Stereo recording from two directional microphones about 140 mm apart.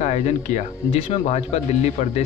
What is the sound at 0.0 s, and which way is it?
Speech, 55° left (ahead or behind).